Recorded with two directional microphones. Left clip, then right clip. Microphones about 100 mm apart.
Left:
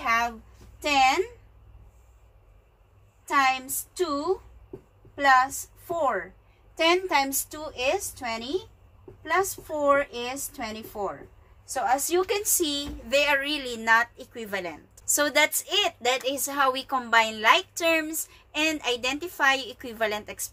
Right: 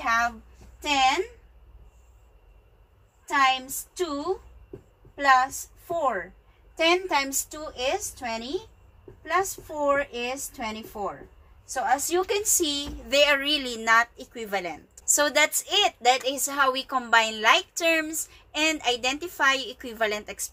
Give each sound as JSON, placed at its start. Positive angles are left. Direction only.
{"t": 0.0, "sound": "a sound", "side_deg": 0}
{"t": 0.8, "sound": "a woman's voice", "side_deg": 10}
{"t": 3.3, "sound": "a woman's voice", "side_deg": 10}
{"t": 10.6, "sound": "a woman's voice", "side_deg": 5}
{"t": 12.6, "sound": "speech", "side_deg": -15}
{"t": 13.1, "sound": "a woman's voice", "side_deg": -30}
{"t": 15.0, "sound": "a woman's voice", "side_deg": 0}